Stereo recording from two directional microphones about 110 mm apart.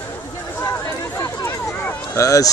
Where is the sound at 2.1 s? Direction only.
30° left (ahead or behind).